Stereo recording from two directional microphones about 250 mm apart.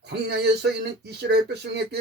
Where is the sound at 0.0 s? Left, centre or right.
Right.